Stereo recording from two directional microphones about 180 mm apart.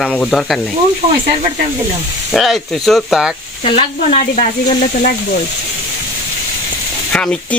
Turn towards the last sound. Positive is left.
turn(degrees=5)  # may be behind; listen again after turning